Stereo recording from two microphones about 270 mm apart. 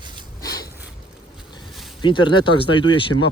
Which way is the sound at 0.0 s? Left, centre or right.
Centre.